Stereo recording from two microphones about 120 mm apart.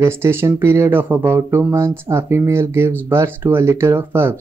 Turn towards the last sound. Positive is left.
turn(degrees=-20)  # may be behind; listen again after turning